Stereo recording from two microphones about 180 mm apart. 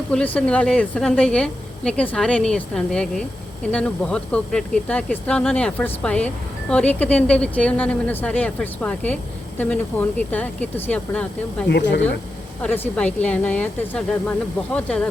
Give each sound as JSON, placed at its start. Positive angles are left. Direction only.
{"t": 0.1, "sound": "a woman's voice", "side_deg": 5}
{"t": 11.7, "sound": "speech", "side_deg": 75}
{"t": 12.6, "sound": "speech", "side_deg": 10}